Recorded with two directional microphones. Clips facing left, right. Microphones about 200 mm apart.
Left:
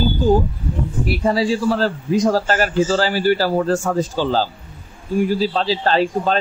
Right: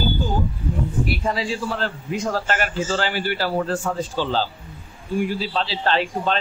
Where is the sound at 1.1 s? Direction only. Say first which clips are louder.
Left 6 dB; 40° left (ahead or behind).